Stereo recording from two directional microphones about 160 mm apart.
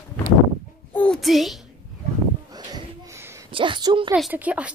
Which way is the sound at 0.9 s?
5° left (ahead or behind).